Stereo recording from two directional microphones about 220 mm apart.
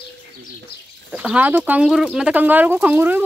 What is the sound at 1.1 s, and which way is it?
Speech, 5° right (ahead or behind).